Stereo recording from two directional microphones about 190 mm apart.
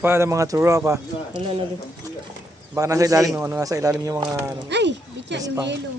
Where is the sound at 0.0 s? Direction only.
15° right (ahead or behind).